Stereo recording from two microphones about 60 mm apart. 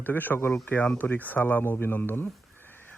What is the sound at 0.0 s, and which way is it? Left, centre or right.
Speech, left.